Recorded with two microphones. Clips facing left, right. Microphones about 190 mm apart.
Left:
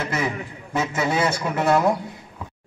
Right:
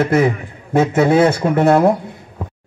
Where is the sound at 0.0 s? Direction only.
55° right (ahead or behind).